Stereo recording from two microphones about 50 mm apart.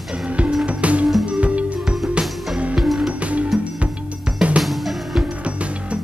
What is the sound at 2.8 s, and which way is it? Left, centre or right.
Music, centre.